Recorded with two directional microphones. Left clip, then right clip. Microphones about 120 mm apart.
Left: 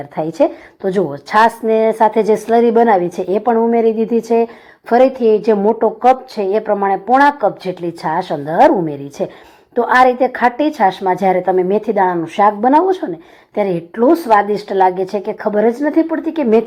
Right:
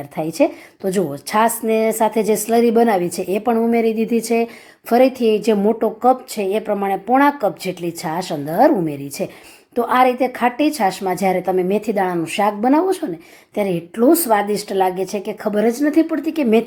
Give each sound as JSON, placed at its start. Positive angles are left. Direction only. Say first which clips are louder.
{"t": 0.2, "sound": "a woman's voice", "louder": "left 3 dB", "side_deg": -20}
{"t": 10.8, "sound": "a woman's voice", "louder": "left 5 dB", "side_deg": -30}
{"t": 11.9, "sound": "a woman's voice", "louder": "left 5 dB", "side_deg": -40}
{"t": 16.4, "sound": "a woman's voice", "louder": "left 4 dB", "side_deg": -25}